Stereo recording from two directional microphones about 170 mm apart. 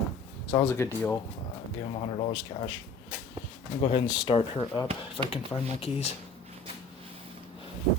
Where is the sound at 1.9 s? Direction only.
35° left (ahead or behind).